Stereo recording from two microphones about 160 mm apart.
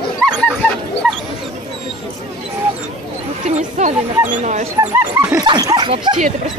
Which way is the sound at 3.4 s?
45° right (ahead or behind).